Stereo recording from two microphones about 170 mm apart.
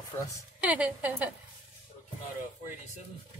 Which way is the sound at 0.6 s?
10° right (ahead or behind).